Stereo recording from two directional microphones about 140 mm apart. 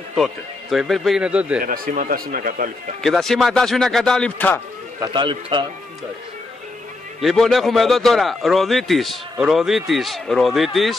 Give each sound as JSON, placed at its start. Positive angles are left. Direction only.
{"t": 0.1, "sound": "a man's voice", "side_deg": 0}
{"t": 1.6, "sound": "speech", "side_deg": -80}
{"t": 3.0, "sound": "a man's voice", "side_deg": 5}
{"t": 5.0, "sound": "a man's voice", "side_deg": -35}
{"t": 7.2, "sound": "a man's voice", "side_deg": 0}